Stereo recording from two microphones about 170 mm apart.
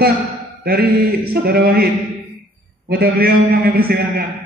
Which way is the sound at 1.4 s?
65° right (ahead or behind).